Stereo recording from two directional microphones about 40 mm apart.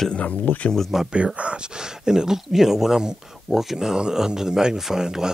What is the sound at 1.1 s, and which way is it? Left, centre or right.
Speech, right.